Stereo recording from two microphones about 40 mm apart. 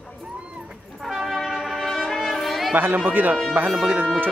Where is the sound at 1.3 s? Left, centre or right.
Centre.